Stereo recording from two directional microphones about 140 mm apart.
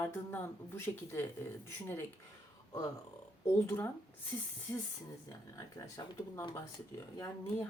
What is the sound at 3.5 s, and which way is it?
Speech, 15° left (ahead or behind).